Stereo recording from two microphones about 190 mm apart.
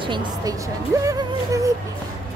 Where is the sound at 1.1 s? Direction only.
15° right (ahead or behind).